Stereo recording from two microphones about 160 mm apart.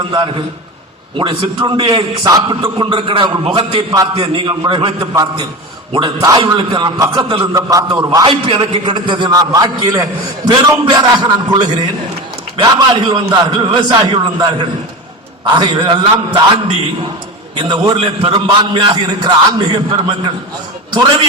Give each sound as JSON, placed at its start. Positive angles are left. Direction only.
{"t": 0.1, "sound": "a man's voice", "side_deg": -30}
{"t": 2.2, "sound": "a man's voice", "side_deg": -25}
{"t": 8.3, "sound": "a man's voice", "side_deg": -35}
{"t": 17.6, "sound": "a man's voice", "side_deg": -30}